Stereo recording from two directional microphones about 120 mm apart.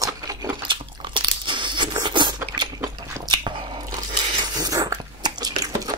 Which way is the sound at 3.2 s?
40° right (ahead or behind).